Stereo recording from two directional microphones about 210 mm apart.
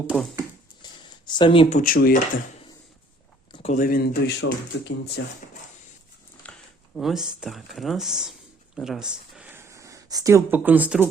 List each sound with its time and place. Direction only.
0.1 s speech: 5° right (ahead or behind)
0.8 s a sound: 20° left (ahead or behind)
1.8 s speech: 45° left (ahead or behind)
3.5 s speech: 30° left (ahead or behind); by 5.2 s 55° left (ahead or behind)
6.4 s a sound: 5° left (ahead or behind)
6.9 s speech: centre (ahead or behind)